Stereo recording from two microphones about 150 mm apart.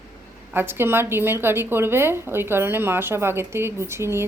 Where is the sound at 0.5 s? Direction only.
15° right (ahead or behind).